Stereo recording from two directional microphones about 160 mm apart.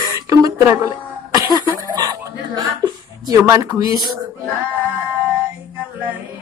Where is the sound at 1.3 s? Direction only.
25° right (ahead or behind).